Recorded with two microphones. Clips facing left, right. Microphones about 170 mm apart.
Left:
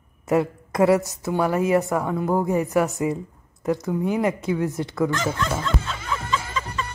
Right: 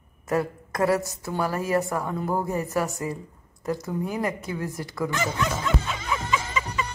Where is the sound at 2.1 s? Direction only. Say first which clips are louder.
Left 6 dB; 15° left (ahead or behind).